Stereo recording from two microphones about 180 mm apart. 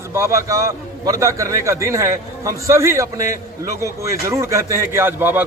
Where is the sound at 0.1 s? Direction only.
15° right (ahead or behind).